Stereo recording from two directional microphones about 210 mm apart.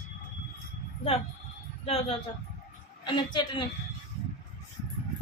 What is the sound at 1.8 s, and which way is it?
A woman's voice, 30° left (ahead or behind).